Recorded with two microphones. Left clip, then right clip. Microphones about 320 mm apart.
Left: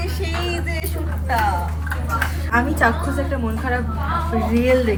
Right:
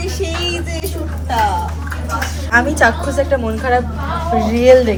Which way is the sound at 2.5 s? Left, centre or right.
Right.